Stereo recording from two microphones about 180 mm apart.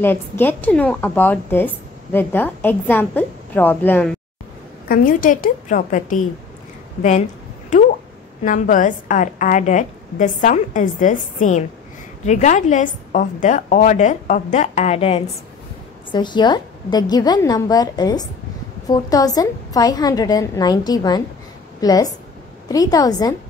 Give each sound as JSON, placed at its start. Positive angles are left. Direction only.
{"t": 0.0, "sound": "a woman's voice", "side_deg": 10}
{"t": 4.8, "sound": "a woman's voice", "side_deg": 50}
{"t": 8.5, "sound": "a woman's voice", "side_deg": 45}